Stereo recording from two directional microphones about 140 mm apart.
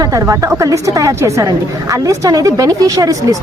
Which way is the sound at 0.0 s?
20° right (ahead or behind).